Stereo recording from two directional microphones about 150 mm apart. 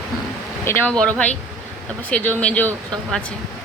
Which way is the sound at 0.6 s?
15° left (ahead or behind).